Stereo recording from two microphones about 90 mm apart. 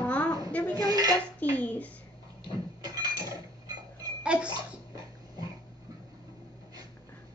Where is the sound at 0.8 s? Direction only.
45° right (ahead or behind).